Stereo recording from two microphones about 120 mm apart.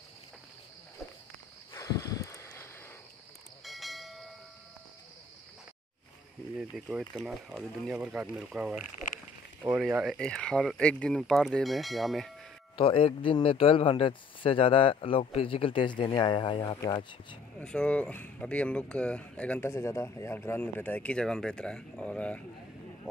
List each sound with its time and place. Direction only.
1.7 s a sound: 25° left (ahead or behind)
3.6 s train: centre (ahead or behind)
6.9 s speech: 5° right (ahead or behind)
10.0 s speech: 5° left (ahead or behind)
12.7 s speech: 50° left (ahead or behind)
17.6 s speech: 10° left (ahead or behind)
19.7 s speech: 20° left (ahead or behind)